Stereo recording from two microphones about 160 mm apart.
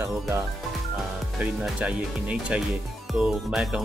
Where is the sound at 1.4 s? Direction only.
10° right (ahead or behind).